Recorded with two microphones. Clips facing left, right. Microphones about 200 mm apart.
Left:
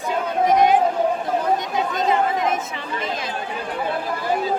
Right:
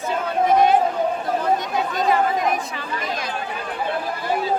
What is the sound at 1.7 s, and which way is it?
Chatter, 20° left (ahead or behind).